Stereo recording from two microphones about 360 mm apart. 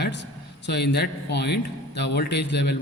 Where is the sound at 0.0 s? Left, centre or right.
Left.